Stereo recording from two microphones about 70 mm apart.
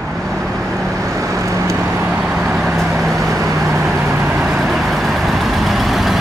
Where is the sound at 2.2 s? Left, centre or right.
Centre.